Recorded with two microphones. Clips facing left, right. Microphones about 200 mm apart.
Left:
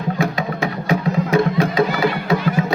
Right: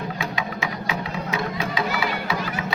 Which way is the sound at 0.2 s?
45° left (ahead or behind).